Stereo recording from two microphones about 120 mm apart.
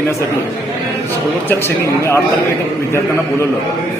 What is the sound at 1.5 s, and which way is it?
Speech, 20° left (ahead or behind).